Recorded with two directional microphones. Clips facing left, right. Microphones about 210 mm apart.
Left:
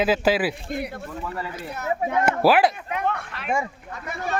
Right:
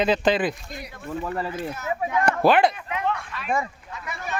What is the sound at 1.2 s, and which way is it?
Speech, 35° right (ahead or behind).